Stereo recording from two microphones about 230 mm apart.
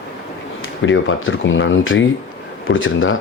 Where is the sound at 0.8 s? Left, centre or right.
Left.